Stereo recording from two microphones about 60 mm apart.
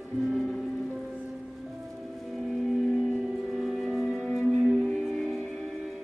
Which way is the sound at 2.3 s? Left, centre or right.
Centre.